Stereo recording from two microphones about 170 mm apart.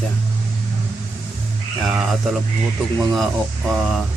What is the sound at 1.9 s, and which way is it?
Speech, 5° right (ahead or behind).